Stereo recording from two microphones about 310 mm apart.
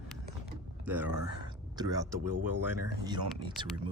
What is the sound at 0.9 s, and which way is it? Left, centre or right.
Speech, centre.